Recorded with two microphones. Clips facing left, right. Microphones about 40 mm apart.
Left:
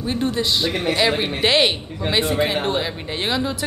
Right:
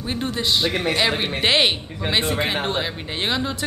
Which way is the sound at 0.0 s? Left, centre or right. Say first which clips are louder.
Left 3 dB; centre.